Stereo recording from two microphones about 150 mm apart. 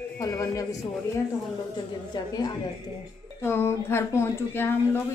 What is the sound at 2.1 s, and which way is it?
Speech, 25° left (ahead or behind).